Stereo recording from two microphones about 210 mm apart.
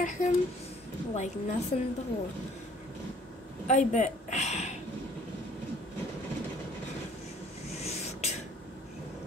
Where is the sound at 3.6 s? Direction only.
35° left (ahead or behind).